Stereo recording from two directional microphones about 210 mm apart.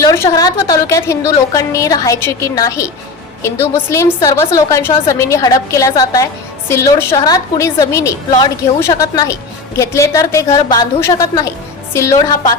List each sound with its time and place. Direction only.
0.0 s a woman's voice: 15° left (ahead or behind)